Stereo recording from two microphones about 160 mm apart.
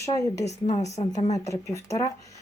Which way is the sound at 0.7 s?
45° left (ahead or behind).